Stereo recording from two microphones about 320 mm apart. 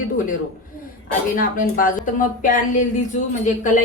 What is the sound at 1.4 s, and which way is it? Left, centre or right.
A woman's voice, left.